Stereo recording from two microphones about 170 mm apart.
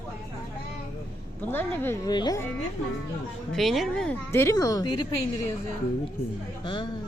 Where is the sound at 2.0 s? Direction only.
25° left (ahead or behind).